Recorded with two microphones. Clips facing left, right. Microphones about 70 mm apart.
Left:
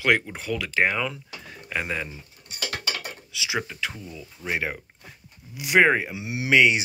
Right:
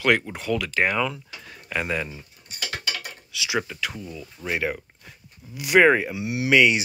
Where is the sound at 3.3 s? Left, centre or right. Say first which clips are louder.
Right 3 dB; left.